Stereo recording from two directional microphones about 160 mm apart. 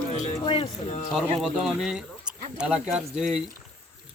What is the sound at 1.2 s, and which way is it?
Speech, centre (ahead or behind).